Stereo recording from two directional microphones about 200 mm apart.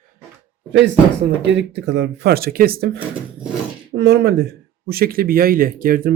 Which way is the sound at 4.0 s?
60° right (ahead or behind).